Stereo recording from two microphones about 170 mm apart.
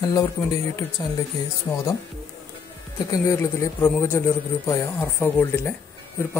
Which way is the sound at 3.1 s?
20° left (ahead or behind).